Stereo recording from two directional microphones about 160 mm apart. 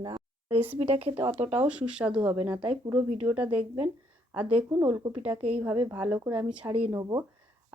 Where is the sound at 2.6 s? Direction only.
30° right (ahead or behind).